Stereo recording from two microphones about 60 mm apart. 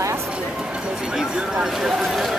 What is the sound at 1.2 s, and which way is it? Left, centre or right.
Speech, centre.